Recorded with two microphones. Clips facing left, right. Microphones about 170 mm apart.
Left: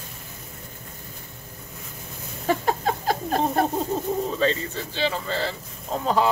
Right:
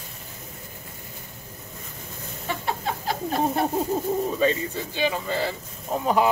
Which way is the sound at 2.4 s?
45° left (ahead or behind).